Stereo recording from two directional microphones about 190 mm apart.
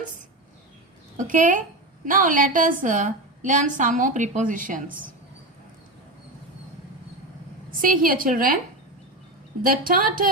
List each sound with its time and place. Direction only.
1.1 s a woman's voice: 45° right (ahead or behind)
7.7 s a woman's voice: 45° right (ahead or behind)
9.6 s a woman's voice: 50° right (ahead or behind)